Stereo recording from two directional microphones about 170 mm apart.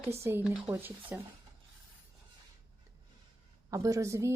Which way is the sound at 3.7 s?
20° right (ahead or behind).